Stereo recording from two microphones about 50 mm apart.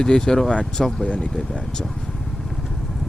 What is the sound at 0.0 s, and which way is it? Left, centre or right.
Speech, centre.